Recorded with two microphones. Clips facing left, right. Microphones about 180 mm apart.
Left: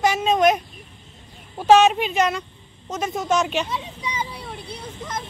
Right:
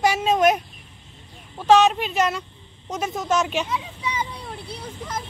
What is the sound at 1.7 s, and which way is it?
Speech, 5° left (ahead or behind).